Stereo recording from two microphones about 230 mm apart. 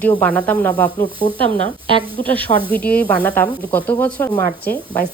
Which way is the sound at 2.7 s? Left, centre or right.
Centre.